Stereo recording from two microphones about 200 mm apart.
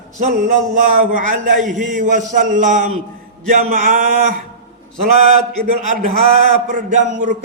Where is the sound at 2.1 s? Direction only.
40° right (ahead or behind).